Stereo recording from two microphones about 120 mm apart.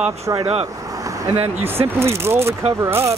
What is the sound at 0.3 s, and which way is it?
Speech, 30° right (ahead or behind).